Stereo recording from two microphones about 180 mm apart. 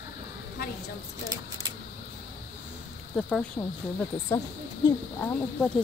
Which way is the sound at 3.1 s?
5° left (ahead or behind).